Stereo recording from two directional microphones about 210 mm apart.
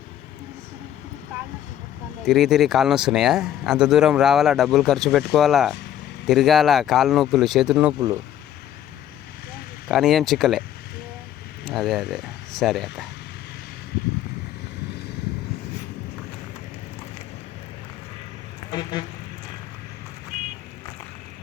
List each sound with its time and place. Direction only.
2.2 s speech: centre (ahead or behind)
9.9 s speech: centre (ahead or behind)
11.6 s speech: centre (ahead or behind)
18.7 s a sound: 20° left (ahead or behind)